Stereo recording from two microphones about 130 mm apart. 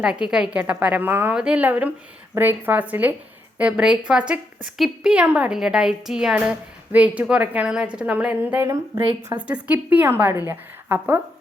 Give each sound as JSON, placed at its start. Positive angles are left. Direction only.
{"t": 0.0, "sound": "a woman's voice", "side_deg": -5}